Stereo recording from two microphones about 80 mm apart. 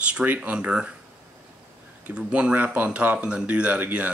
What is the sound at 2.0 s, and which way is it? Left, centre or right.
Speech, centre.